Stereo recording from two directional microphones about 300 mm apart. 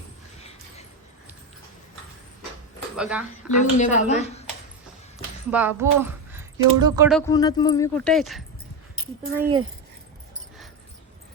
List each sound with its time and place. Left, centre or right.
2.9 s speech: centre
3.6 s speech: left
5.5 s speech: centre
7.1 s speech: centre
9.4 s speech: centre